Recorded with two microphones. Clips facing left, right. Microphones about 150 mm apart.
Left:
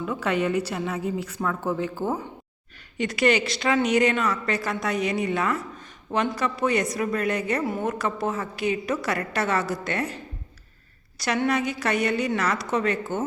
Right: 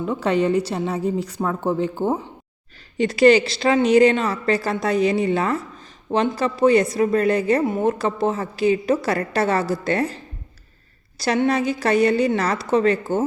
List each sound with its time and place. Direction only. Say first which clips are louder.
0.0 s a woman's voice: right 5 dB; 30° right (ahead or behind)
11.2 s a woman's voice: right 4 dB; 30° right (ahead or behind)